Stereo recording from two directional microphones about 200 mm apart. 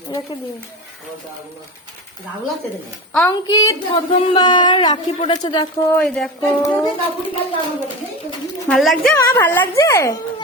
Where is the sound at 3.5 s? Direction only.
20° left (ahead or behind).